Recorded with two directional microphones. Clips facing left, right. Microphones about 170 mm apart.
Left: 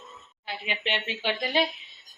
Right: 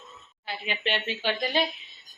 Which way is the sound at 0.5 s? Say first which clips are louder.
Right 1 dB; 15° left (ahead or behind).